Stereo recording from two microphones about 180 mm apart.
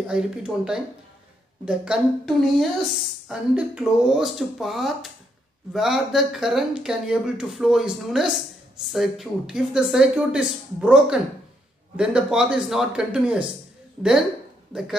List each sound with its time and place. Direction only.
0.0 s speech: 5° right (ahead or behind)